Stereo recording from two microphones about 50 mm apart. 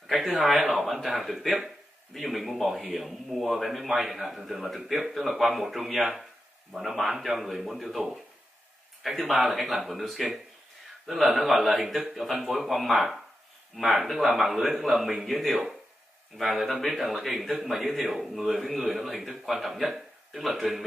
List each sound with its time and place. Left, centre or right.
0.0 s a man's voice: centre
9.2 s a man's voice: centre